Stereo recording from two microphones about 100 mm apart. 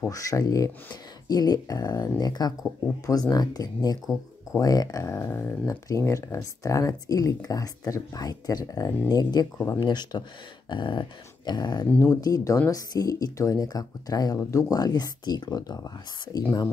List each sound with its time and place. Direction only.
0.1 s speech: 35° left (ahead or behind)
4.0 s speech: 5° right (ahead or behind)
4.6 s speech: 35° left (ahead or behind)
5.1 s speech: 25° left (ahead or behind); by 9.5 s 40° left (ahead or behind)
9.7 s dog: 45° left (ahead or behind)
12.0 s speech: 30° left (ahead or behind)